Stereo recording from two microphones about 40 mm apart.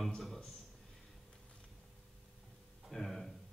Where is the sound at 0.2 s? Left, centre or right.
Centre.